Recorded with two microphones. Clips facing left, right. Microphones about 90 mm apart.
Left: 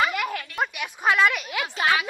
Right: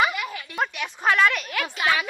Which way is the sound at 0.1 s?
55° left (ahead or behind).